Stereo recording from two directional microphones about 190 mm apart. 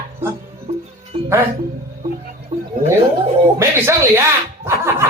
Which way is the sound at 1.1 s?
30° right (ahead or behind).